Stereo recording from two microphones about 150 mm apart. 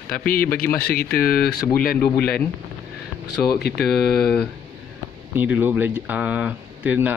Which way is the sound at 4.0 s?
90° left.